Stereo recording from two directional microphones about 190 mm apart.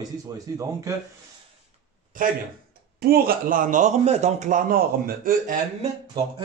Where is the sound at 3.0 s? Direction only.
55° right (ahead or behind).